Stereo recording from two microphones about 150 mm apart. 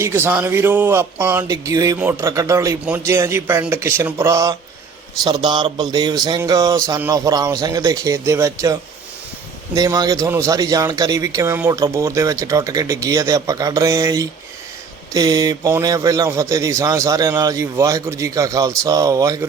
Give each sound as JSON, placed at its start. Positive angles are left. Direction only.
{"t": 0.0, "sound": "a man's voice", "side_deg": -15}
{"t": 5.2, "sound": "a man's voice", "side_deg": -30}